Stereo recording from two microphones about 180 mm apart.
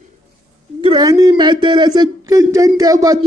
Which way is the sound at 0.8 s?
25° right (ahead or behind).